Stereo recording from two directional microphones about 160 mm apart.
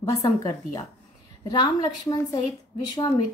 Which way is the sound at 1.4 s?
25° left (ahead or behind).